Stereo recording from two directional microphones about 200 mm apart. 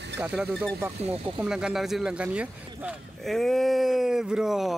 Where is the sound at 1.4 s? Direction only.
5° right (ahead or behind).